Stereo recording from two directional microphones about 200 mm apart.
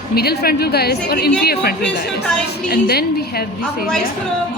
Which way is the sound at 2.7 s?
50° left (ahead or behind).